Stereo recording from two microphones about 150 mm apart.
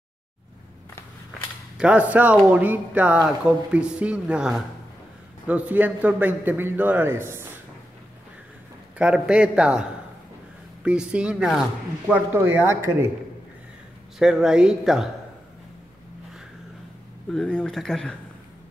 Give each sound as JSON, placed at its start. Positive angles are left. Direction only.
{"t": 1.8, "sound": "speech", "side_deg": -10}
{"t": 8.9, "sound": "speech", "side_deg": -5}
{"t": 14.1, "sound": "a man's voice", "side_deg": 0}
{"t": 17.3, "sound": "a man's voice", "side_deg": 5}